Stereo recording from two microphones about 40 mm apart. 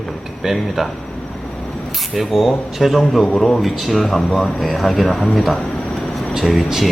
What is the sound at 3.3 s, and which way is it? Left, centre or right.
Speech, centre.